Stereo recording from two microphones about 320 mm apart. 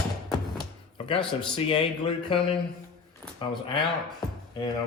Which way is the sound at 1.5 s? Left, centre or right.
Centre.